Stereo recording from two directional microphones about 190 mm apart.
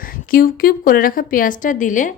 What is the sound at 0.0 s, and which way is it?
A woman's voice, 50° left (ahead or behind).